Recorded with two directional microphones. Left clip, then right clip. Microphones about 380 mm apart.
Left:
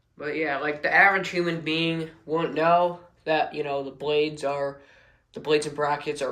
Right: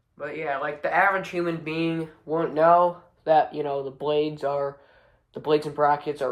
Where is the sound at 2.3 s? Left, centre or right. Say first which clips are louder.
Right 3 dB; centre.